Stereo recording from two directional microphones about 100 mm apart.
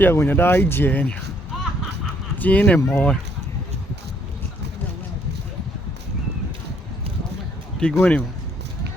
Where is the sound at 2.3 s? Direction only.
15° left (ahead or behind).